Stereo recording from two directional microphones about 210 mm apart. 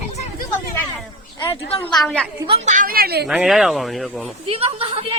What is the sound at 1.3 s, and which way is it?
Speech, 25° left (ahead or behind).